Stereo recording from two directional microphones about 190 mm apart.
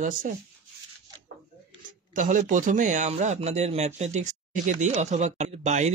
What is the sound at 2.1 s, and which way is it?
Speech, 45° right (ahead or behind).